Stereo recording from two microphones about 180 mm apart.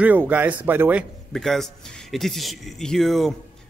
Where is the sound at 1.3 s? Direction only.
Centre (ahead or behind).